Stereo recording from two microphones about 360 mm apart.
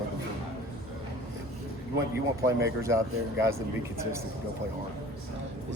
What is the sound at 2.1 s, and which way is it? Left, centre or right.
Speech, centre.